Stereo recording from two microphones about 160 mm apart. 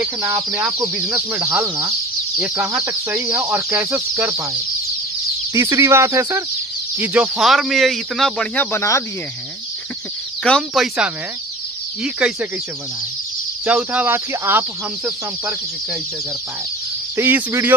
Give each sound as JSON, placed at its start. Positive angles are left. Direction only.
{"t": 0.5, "sound": "speech", "side_deg": -5}
{"t": 5.5, "sound": "speech", "side_deg": -15}
{"t": 7.0, "sound": "speech", "side_deg": -5}
{"t": 8.7, "sound": "speech", "side_deg": 20}
{"t": 10.4, "sound": "speech", "side_deg": 0}
{"t": 13.7, "sound": "speech", "side_deg": -10}
{"t": 17.2, "sound": "speech", "side_deg": -15}